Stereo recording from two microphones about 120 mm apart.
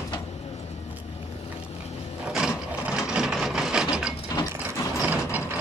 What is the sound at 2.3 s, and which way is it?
Wood, 5° right (ahead or behind).